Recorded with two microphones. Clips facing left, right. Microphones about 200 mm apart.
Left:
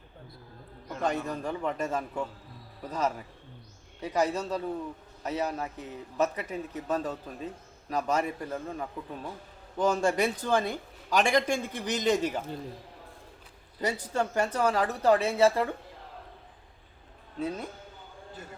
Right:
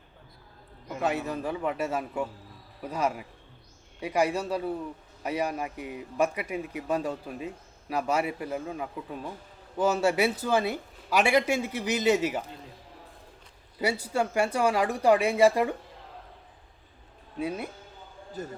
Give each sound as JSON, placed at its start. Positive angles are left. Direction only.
{"t": 0.9, "sound": "a man's voice", "side_deg": -5}
{"t": 13.7, "sound": "a man's voice", "side_deg": -10}
{"t": 18.4, "sound": "speech", "side_deg": -40}